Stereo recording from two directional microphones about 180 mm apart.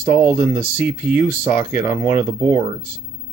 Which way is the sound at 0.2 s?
10° right (ahead or behind).